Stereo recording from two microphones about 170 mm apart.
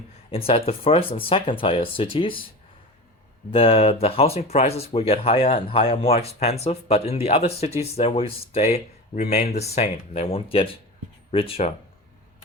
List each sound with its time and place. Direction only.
0.3 s speech: 35° left (ahead or behind)
3.5 s speech: 35° left (ahead or behind)